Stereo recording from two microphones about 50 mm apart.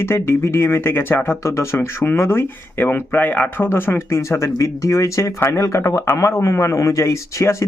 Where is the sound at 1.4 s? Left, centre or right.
Left.